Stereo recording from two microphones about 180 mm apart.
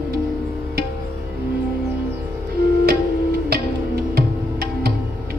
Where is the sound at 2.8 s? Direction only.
60° right (ahead or behind).